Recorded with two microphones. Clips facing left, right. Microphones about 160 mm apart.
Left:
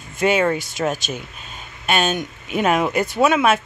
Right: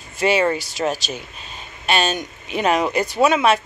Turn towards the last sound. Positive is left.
turn(degrees=5)  # may be behind; listen again after turning